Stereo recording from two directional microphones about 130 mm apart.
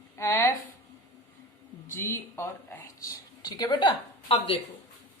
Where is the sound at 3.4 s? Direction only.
30° left (ahead or behind).